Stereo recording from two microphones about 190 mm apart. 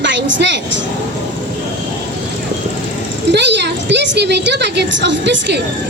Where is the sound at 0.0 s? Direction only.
70° right (ahead or behind).